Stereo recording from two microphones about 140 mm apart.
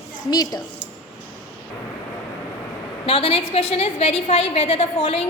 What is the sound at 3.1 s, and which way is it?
A woman's voice, 45° left (ahead or behind).